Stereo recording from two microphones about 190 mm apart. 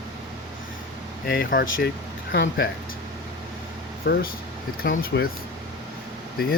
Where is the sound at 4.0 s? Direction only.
50° left (ahead or behind).